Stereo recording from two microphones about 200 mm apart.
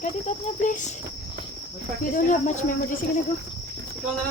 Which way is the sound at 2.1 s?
40° left (ahead or behind).